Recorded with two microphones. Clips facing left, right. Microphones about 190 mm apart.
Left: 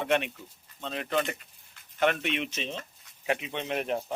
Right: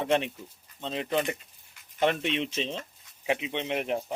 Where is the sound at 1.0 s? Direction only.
10° right (ahead or behind).